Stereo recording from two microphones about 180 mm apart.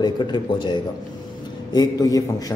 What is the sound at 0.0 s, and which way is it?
A man's voice, 25° left (ahead or behind).